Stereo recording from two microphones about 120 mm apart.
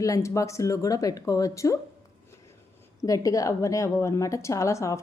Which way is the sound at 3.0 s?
30° left (ahead or behind).